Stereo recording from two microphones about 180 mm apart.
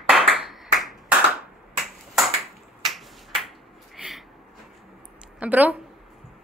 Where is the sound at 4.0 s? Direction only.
Centre (ahead or behind).